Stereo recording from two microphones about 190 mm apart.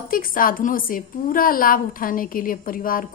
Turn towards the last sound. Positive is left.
turn(degrees=50)  # may be behind; listen again after turning